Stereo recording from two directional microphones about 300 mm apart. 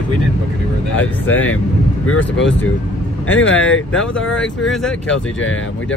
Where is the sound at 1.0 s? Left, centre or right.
Centre.